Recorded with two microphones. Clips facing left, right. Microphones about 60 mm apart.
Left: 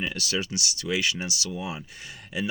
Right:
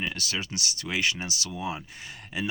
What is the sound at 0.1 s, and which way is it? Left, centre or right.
Speech, right.